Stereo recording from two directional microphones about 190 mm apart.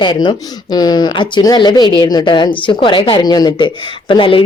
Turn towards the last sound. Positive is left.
turn(degrees=25)  # may be behind; listen again after turning